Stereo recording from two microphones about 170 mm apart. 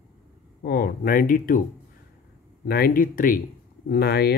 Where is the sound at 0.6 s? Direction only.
65° left (ahead or behind).